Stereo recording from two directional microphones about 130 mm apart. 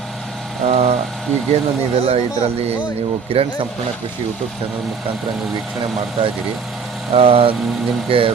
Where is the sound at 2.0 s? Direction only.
55° right (ahead or behind).